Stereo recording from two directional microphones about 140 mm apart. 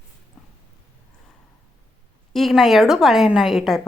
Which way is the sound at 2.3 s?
Centre (ahead or behind).